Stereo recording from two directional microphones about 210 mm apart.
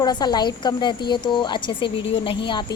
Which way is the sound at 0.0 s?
20° left (ahead or behind).